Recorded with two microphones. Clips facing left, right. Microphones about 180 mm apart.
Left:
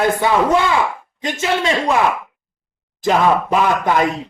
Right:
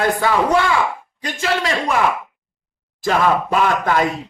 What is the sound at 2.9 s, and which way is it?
Speech, 20° left (ahead or behind).